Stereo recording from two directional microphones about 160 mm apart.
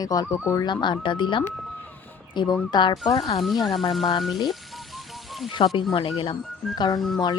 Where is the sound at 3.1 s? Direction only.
40° left (ahead or behind).